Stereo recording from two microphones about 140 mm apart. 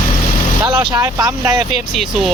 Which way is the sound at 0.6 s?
30° right (ahead or behind).